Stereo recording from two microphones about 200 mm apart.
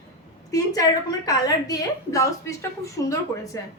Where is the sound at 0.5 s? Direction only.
15° left (ahead or behind).